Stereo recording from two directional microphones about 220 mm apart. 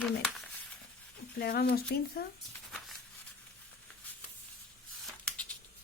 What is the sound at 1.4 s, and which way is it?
Speech, 45° left (ahead or behind).